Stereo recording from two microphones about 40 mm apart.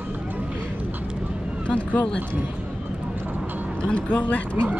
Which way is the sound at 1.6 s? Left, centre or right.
Left.